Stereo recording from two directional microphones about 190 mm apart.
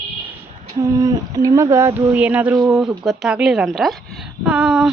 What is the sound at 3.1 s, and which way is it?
Speech, centre (ahead or behind).